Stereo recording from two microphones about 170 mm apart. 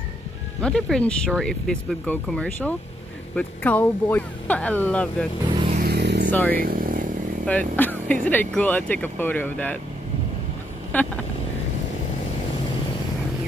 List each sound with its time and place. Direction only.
0.6 s speech: 5° left (ahead or behind)
5.9 s vehicle: 75° right (ahead or behind)
6.3 s speech: 10° left (ahead or behind)
6.6 s motorcycle: 55° right (ahead or behind)
7.4 s speech: 10° left (ahead or behind)
10.9 s speech: 10° left (ahead or behind)